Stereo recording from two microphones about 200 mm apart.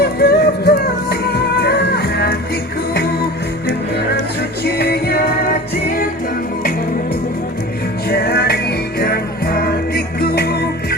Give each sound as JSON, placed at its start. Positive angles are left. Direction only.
{"t": 0.0, "sound": "music", "side_deg": 50}
{"t": 4.8, "sound": "music", "side_deg": 55}
{"t": 8.1, "sound": "music", "side_deg": 50}